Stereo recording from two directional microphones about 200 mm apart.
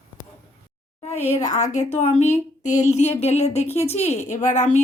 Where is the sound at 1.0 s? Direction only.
35° left (ahead or behind).